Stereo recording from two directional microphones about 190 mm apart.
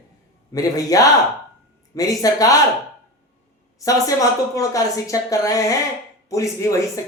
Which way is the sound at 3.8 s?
20° left (ahead or behind).